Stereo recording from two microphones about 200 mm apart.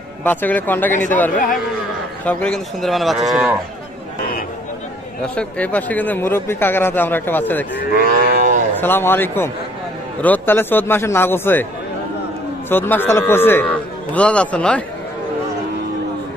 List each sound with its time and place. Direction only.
0.2 s a man's voice: 10° left (ahead or behind)
5.2 s speech: 5° left (ahead or behind)
7.9 s cattle: 45° right (ahead or behind)
8.8 s speech: 10° left (ahead or behind)
12.6 s a man's voice: 10° left (ahead or behind)